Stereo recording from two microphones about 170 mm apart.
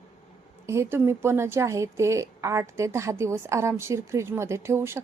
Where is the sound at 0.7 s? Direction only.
15° right (ahead or behind).